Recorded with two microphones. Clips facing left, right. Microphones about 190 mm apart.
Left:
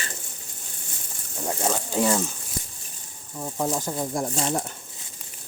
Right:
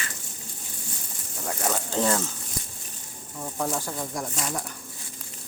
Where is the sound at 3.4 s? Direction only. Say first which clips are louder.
Left 3 dB; 15° left (ahead or behind).